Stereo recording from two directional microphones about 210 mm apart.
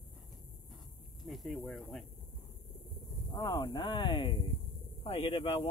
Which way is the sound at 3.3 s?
20° left (ahead or behind).